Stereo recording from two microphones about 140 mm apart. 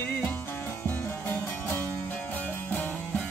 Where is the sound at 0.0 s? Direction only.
15° left (ahead or behind).